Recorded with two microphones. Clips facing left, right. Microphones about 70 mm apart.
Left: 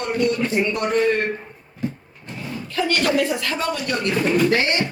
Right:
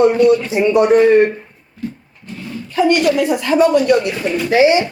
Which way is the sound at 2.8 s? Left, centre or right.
Centre.